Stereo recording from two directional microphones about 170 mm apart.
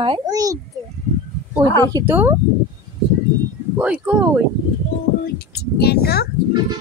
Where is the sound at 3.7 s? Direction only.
10° right (ahead or behind).